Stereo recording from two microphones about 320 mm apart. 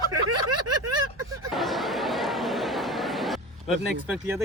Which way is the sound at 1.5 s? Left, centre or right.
Centre.